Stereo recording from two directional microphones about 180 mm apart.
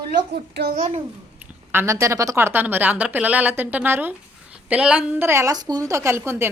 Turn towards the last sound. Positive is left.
turn(degrees=-15)  # may be behind; listen again after turning